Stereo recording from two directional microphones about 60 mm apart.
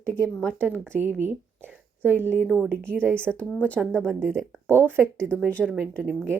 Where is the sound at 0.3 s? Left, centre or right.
Centre.